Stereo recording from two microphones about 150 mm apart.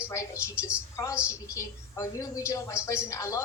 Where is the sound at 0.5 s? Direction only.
10° right (ahead or behind).